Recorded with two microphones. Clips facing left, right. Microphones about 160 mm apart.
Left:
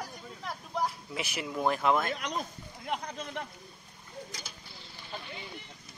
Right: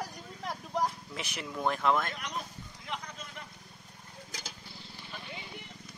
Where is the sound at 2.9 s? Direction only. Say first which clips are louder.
Left 6 dB; 60° left (ahead or behind).